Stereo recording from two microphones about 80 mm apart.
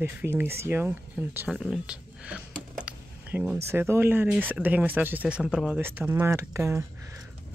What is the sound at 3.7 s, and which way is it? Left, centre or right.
Speech, right.